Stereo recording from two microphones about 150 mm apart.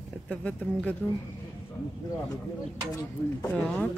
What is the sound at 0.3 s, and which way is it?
Speech, 10° left (ahead or behind).